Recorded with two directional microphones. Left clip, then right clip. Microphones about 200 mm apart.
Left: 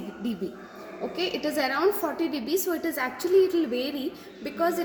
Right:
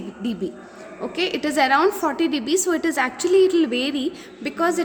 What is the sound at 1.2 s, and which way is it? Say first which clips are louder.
Speech: right 6 dB; 70° right (ahead or behind).